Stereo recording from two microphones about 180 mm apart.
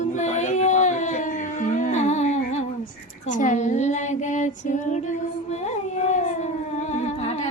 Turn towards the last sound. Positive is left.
turn(degrees=35)  # may be behind; listen again after turning